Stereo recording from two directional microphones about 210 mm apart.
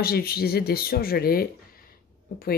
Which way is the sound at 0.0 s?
45° left (ahead or behind).